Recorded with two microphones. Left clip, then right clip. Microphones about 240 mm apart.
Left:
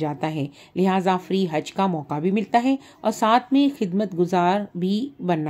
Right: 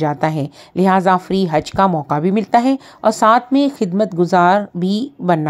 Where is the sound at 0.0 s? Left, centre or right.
Right.